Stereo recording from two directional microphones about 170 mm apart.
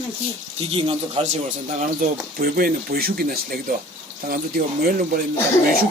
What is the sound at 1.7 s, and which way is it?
Speech, 55° right (ahead or behind).